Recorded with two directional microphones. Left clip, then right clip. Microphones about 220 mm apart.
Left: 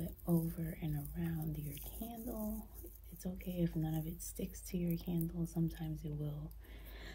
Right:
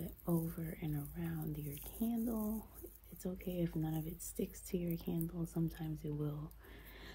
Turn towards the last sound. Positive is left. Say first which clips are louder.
# even
turn(degrees=-10)  # may be behind; listen again after turning